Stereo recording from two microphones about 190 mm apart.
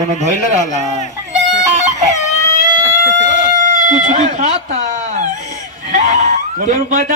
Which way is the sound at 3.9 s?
40° right (ahead or behind).